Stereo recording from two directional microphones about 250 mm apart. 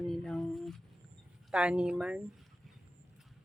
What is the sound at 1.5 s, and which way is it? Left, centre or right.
Speech, centre.